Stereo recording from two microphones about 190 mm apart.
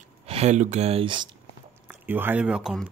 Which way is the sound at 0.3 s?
35° right (ahead or behind).